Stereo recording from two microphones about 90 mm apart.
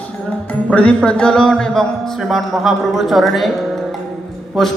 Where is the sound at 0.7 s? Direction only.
15° left (ahead or behind).